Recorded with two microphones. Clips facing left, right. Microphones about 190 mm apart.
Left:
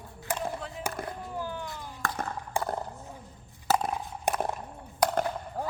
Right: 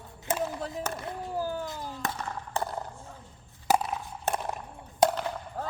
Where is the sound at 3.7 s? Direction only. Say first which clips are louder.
Right 1 dB; 15° right (ahead or behind).